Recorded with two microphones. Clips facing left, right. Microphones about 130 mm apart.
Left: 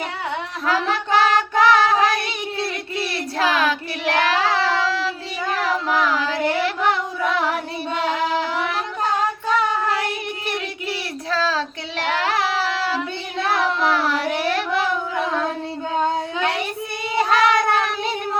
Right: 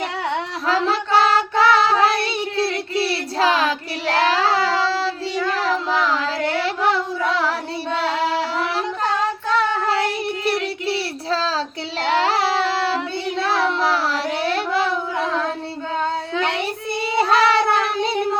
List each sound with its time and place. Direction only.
0.7 s child singing: 30° right (ahead or behind)
9.9 s child singing: 35° right (ahead or behind)
17.2 s cat: 35° right (ahead or behind)